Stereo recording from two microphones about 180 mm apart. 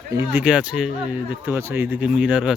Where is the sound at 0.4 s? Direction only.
5° right (ahead or behind).